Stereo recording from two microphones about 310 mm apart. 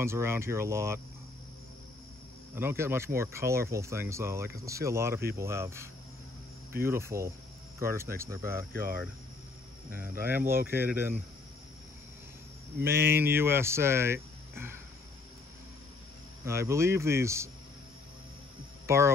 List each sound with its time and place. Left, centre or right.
0.0 s speech: centre
2.5 s speech: centre
8.7 s cricket: right
9.8 s speech: centre
12.8 s speech: centre
16.4 s speech: centre
18.9 s speech: centre